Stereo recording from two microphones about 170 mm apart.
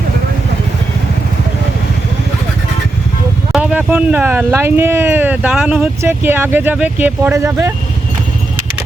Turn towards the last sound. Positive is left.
turn(degrees=-15)  # may be behind; listen again after turning